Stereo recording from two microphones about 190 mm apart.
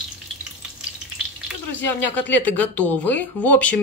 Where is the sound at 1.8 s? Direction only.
10° left (ahead or behind).